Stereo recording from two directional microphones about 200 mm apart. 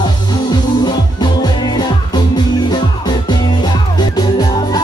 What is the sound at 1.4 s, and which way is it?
Music, 20° left (ahead or behind).